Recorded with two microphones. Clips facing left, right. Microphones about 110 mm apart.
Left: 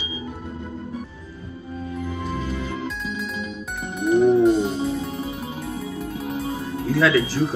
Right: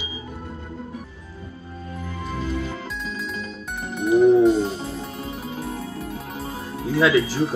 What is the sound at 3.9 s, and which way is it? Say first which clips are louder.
Music: right 2 dB; 5° left (ahead or behind).